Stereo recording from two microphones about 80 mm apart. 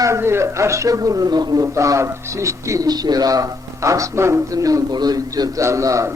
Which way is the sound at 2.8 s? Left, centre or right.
Right.